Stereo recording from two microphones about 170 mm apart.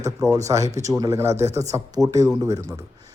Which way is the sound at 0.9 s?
20° right (ahead or behind).